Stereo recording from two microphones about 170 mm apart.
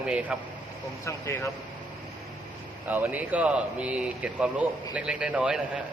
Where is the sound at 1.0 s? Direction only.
15° left (ahead or behind).